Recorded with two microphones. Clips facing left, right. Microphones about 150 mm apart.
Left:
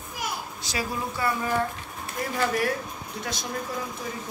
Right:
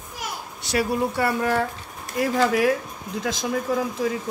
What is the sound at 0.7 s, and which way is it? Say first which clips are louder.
Speech: right 8 dB; 65° right (ahead or behind).